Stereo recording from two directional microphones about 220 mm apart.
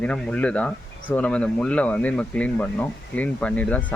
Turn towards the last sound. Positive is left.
turn(degrees=5)  # may be behind; listen again after turning